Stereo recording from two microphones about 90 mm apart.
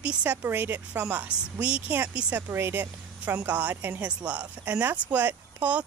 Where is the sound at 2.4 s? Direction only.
30° right (ahead or behind).